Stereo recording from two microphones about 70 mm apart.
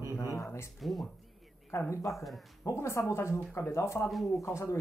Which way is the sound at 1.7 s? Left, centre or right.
Left.